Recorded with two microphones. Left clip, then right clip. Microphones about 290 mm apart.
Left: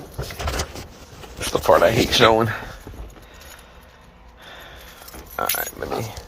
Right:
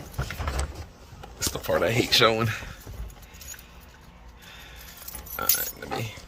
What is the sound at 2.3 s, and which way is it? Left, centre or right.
Speech, centre.